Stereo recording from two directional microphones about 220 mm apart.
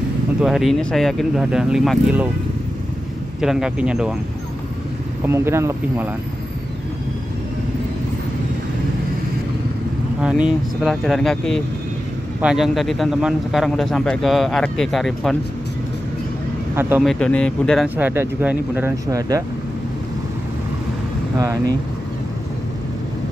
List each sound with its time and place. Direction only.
0.4 s speech: centre (ahead or behind)
3.3 s speech: centre (ahead or behind)
5.2 s speech: 10° right (ahead or behind)
10.2 s speech: 5° right (ahead or behind)
17.0 s speech: 5° left (ahead or behind)
17.8 s speech: 10° right (ahead or behind)
21.4 s speech: 15° right (ahead or behind)